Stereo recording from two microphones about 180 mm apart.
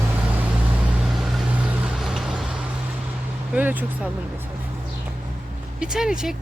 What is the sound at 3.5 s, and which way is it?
Speech, 10° right (ahead or behind).